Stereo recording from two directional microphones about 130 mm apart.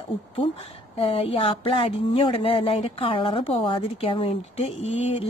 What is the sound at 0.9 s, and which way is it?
A woman's voice, 50° left (ahead or behind).